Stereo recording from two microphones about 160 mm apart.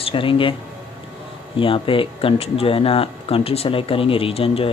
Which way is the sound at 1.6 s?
35° left (ahead or behind).